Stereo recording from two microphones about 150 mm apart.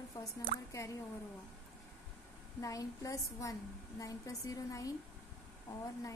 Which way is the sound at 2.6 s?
20° left (ahead or behind).